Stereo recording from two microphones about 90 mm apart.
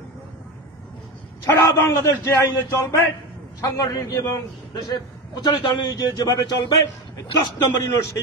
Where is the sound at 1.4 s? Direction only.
30° left (ahead or behind); by 6.5 s 45° left (ahead or behind).